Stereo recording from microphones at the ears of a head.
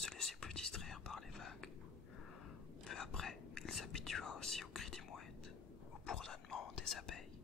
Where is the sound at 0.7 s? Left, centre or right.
Left.